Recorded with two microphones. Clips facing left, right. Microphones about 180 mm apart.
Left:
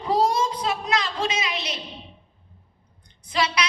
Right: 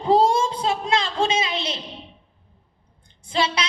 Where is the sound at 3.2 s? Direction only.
30° right (ahead or behind).